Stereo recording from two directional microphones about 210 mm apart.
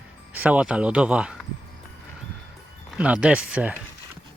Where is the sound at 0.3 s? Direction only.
5° right (ahead or behind).